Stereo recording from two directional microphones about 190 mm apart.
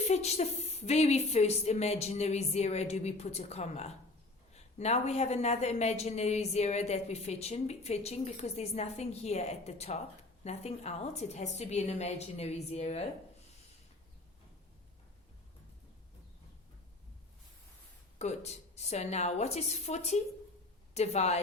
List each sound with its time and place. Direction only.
0.0 s a woman's voice: 35° left (ahead or behind)
18.2 s a woman's voice: 35° left (ahead or behind)